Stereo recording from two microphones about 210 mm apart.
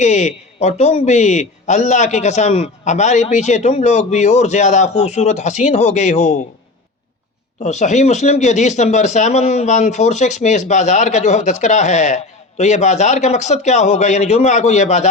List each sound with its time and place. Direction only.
0.0 s speech: 35° left (ahead or behind)
7.6 s speech: 35° left (ahead or behind)